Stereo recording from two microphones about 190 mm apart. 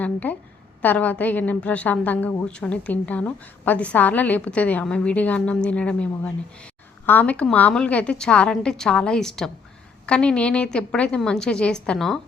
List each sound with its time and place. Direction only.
0.0 s a woman's voice: 10° left (ahead or behind)